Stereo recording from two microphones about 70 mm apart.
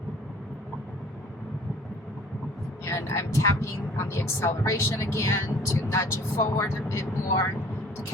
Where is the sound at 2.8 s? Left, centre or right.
Left.